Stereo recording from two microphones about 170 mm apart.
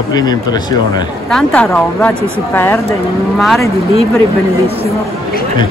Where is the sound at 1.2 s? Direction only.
5° left (ahead or behind).